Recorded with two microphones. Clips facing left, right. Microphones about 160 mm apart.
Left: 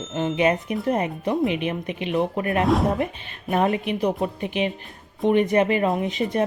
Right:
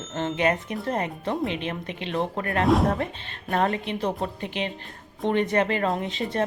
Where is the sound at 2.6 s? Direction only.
Centre (ahead or behind).